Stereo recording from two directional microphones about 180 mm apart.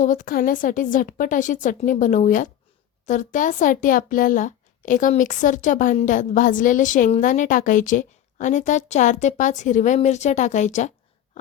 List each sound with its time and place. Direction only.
0.0 s speech: 45° left (ahead or behind)